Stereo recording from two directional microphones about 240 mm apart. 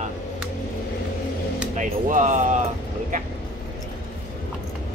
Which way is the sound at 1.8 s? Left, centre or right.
Right.